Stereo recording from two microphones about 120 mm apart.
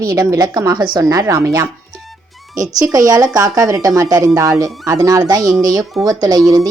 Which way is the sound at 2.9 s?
30° right (ahead or behind).